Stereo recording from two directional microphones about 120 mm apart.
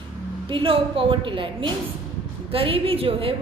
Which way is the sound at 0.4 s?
45° right (ahead or behind).